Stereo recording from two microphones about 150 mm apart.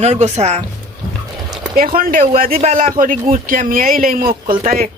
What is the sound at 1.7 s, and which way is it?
Speech, 75° right (ahead or behind).